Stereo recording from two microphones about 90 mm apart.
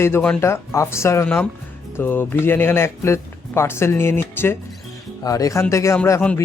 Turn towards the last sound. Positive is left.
turn(degrees=25)  # may be behind; listen again after turning